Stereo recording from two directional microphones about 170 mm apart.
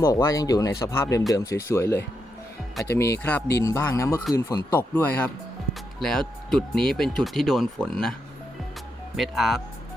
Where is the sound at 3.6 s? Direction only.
20° left (ahead or behind); by 8.1 s 5° left (ahead or behind).